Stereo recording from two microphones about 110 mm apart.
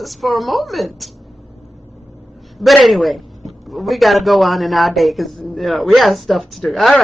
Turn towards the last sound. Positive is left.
turn(degrees=0)  # may be behind; listen again after turning